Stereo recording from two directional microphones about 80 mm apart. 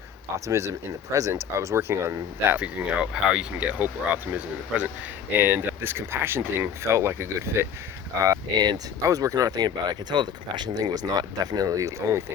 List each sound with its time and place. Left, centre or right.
0.3 s speech: right
2.6 s speech: centre; by 7.7 s right
8.5 s speech: right
9.0 s speech: right